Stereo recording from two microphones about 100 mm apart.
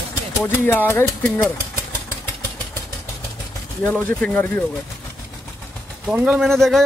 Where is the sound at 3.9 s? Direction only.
10° left (ahead or behind).